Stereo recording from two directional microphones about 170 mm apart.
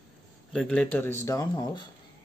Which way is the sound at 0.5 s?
5° left (ahead or behind).